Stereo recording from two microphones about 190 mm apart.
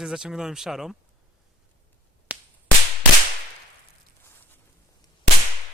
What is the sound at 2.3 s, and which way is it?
Whip, 5° right (ahead or behind).